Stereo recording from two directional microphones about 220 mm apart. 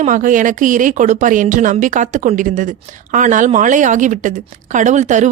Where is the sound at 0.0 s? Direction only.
35° right (ahead or behind).